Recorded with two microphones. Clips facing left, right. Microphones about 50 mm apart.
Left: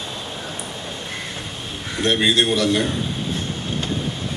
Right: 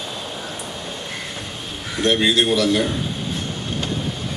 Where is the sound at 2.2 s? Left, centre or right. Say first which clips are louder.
Left 1 dB; centre.